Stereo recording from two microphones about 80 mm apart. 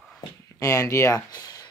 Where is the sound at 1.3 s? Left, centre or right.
Left.